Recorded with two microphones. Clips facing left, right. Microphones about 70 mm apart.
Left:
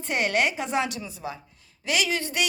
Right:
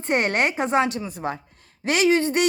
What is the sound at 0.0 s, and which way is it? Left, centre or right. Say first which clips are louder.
A woman's voice: right 3 dB; right.